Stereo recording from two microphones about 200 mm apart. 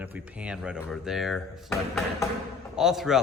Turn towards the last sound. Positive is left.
turn(degrees=0)  # may be behind; listen again after turning